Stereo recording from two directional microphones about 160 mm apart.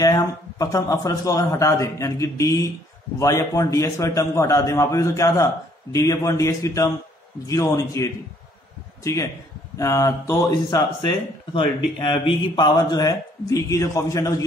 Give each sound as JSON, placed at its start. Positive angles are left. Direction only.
{"t": 0.0, "sound": "speech", "side_deg": 20}